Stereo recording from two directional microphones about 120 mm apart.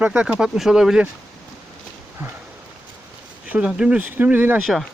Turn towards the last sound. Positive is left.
turn(degrees=-15)  # may be behind; listen again after turning